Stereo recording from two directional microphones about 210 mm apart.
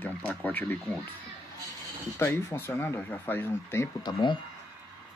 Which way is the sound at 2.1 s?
10° left (ahead or behind).